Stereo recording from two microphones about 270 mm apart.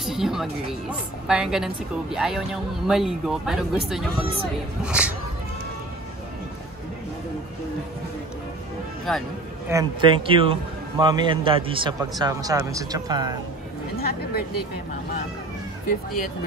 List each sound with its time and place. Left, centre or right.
0.0 s speech: centre
9.1 s speech: centre
9.7 s speech: centre
13.9 s speech: left